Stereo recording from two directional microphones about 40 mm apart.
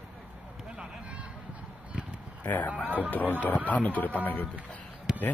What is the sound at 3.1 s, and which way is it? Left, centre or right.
Speech, left.